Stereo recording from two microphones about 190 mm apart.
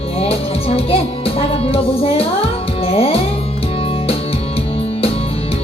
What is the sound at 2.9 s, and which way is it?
Music, 30° left (ahead or behind).